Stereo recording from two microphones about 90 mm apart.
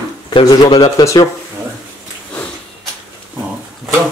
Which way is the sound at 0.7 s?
55° left (ahead or behind).